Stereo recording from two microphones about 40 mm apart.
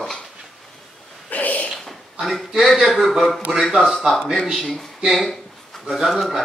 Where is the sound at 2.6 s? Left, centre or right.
Centre.